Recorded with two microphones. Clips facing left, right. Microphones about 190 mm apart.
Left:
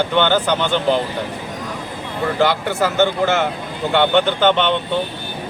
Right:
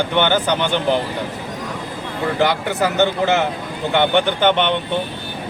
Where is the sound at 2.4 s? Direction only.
15° right (ahead or behind).